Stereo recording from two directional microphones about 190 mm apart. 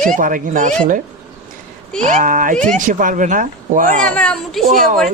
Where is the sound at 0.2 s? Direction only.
45° right (ahead or behind).